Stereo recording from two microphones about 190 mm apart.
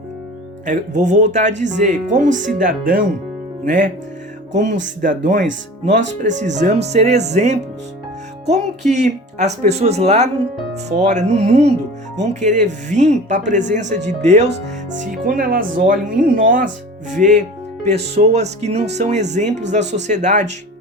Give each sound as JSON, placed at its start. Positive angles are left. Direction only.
{"t": 0.6, "sound": "speech", "side_deg": -40}
{"t": 4.5, "sound": "speech", "side_deg": -40}
{"t": 6.4, "sound": "speech", "side_deg": -40}